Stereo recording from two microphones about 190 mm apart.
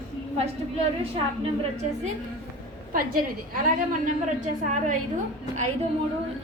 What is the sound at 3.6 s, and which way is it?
A woman's voice, 45° right (ahead or behind).